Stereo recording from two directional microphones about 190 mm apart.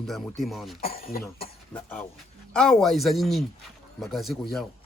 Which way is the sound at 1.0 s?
50° left (ahead or behind).